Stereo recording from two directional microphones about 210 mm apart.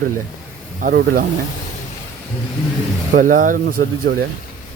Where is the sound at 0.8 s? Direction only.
40° right (ahead or behind).